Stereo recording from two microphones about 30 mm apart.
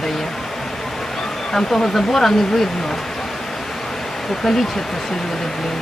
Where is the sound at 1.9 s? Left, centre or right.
Centre.